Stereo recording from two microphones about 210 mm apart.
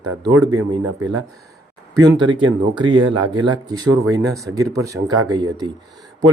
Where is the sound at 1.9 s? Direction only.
20° right (ahead or behind).